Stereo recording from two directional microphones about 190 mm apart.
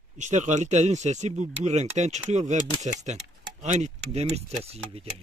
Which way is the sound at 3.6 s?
35° right (ahead or behind).